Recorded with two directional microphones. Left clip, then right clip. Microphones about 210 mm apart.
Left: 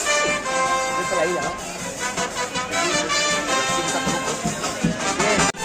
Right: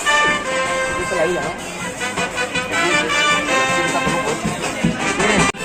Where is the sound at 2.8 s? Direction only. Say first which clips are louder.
Right 5 dB; 55° left (ahead or behind).